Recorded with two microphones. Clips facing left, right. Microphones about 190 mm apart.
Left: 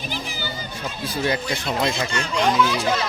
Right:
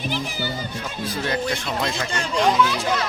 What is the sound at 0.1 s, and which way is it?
Music, 60° right (ahead or behind).